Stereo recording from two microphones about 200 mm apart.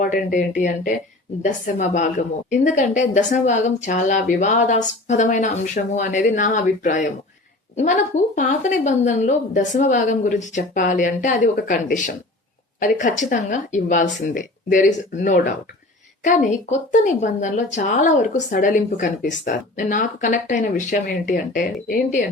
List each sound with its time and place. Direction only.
0.0 s speech: 40° left (ahead or behind)